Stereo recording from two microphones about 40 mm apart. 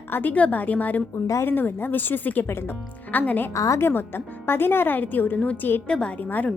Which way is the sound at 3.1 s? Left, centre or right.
Left.